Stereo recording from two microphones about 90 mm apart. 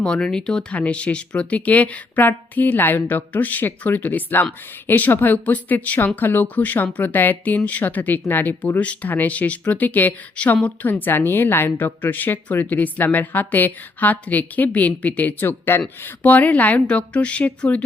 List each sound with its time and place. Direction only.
0.0 s speech: 10° left (ahead or behind)